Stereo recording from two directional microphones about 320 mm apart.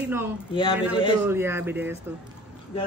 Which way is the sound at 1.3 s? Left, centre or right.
Centre.